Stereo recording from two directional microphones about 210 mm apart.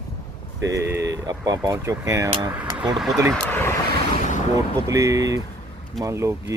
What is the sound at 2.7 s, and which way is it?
Speech, centre (ahead or behind).